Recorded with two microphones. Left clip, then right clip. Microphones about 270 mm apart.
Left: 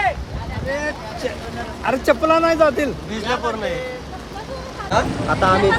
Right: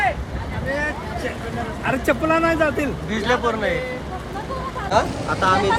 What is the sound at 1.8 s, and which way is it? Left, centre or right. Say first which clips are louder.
Speech: left 4 dB; left.